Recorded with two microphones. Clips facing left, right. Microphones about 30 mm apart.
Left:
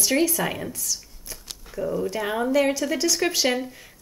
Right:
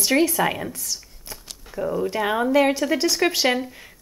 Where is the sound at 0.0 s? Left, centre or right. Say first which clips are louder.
Right 3 dB; right.